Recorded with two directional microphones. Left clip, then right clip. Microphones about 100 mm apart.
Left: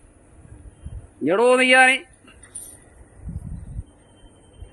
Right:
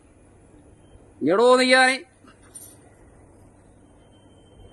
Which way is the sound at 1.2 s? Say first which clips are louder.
Even; 20° right (ahead or behind).